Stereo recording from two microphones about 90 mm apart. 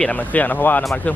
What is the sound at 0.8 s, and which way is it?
Speech, 10° left (ahead or behind).